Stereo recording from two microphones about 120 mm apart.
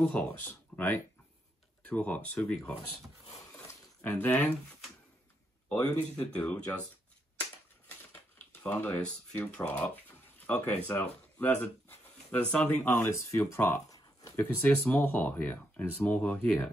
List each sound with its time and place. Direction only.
0.0 s speech: 15° left (ahead or behind)
4.0 s speech: 15° left (ahead or behind)
5.7 s speech: 15° left (ahead or behind)
8.6 s speech: 15° left (ahead or behind)
13.8 s a sound: 30° left (ahead or behind)
14.3 s speech: 15° left (ahead or behind)